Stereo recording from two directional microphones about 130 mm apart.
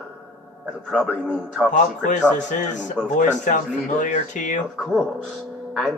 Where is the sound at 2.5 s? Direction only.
70° left (ahead or behind).